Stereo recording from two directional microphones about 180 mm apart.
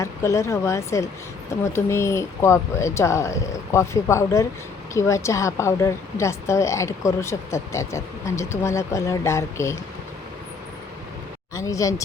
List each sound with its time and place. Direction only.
0.0 s a woman's voice: 15° left (ahead or behind)
11.5 s a woman's voice: 20° left (ahead or behind)